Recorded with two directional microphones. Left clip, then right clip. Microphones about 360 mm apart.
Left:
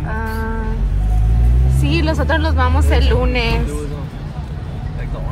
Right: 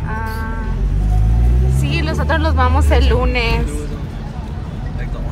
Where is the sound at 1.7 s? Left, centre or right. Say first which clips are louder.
Left 3 dB; centre.